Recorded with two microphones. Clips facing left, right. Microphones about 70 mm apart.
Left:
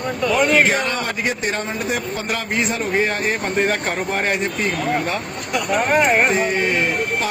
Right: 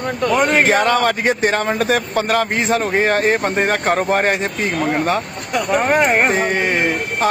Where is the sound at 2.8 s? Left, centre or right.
Right.